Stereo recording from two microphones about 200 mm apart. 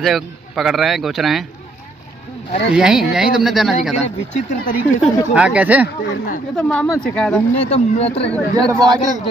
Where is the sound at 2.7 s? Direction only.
5° right (ahead or behind).